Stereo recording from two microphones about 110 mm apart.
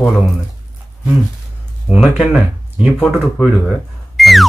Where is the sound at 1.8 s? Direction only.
5° right (ahead or behind).